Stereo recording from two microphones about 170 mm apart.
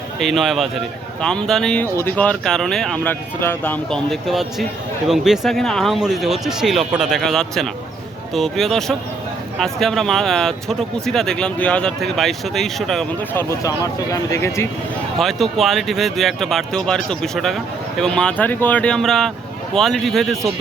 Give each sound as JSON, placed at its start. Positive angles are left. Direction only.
{"t": 0.2, "sound": "speech", "side_deg": 0}
{"t": 13.3, "sound": "speech", "side_deg": 20}
{"t": 15.2, "sound": "speech", "side_deg": 0}